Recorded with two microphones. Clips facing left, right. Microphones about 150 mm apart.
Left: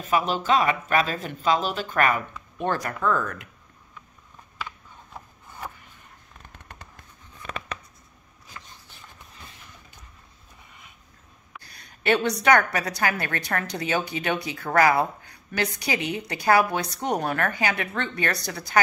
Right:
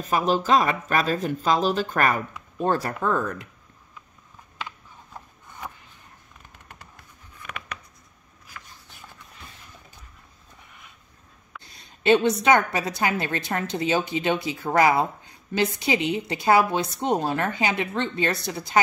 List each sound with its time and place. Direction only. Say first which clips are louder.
0.0 s speech: right 2 dB; 40° right (ahead or behind)
2.6 s a woman's voice: right 2 dB; 30° right (ahead or behind)
7.4 s a sound: left 3 dB; 30° left (ahead or behind)
11.6 s a woman's voice: right 4 dB; 20° right (ahead or behind)